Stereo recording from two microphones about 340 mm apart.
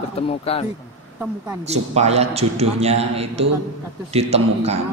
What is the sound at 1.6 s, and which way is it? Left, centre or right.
A man's voice, centre.